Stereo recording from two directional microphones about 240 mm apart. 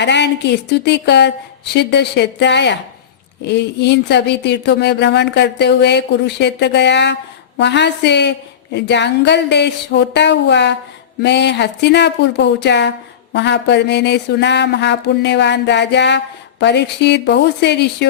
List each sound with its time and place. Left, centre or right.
0.0 s speech: left